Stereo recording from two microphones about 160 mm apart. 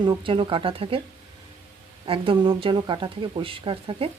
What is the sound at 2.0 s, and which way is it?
Speech, 35° right (ahead or behind).